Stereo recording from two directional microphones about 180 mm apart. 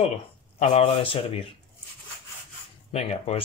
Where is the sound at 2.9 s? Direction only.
35° left (ahead or behind).